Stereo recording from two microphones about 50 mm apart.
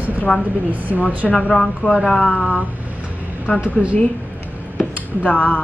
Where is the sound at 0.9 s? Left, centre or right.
Right.